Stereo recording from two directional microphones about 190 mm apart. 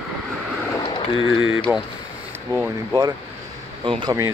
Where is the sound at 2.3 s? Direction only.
10° right (ahead or behind).